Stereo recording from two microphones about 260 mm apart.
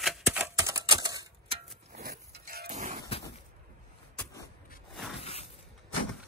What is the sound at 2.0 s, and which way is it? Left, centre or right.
Livestock, right.